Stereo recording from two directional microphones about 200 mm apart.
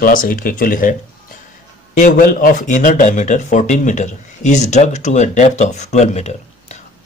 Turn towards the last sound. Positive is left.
turn(degrees=35)  # may be behind; listen again after turning